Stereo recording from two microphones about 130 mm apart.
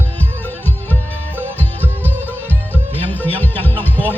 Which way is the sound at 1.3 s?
15° left (ahead or behind).